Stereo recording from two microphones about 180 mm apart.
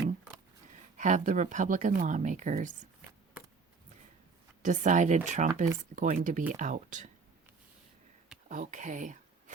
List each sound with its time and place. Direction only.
0.9 s speech: 45° right (ahead or behind)
4.6 s speech: 45° right (ahead or behind)
8.4 s speech: 45° right (ahead or behind)